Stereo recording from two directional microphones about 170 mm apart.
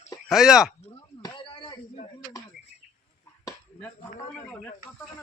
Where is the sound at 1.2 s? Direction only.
30° left (ahead or behind).